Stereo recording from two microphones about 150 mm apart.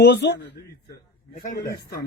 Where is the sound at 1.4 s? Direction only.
60° left (ahead or behind).